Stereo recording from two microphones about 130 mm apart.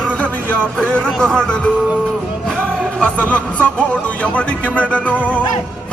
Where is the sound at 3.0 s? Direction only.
10° left (ahead or behind).